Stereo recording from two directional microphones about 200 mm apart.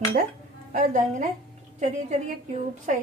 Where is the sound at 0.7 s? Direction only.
35° right (ahead or behind).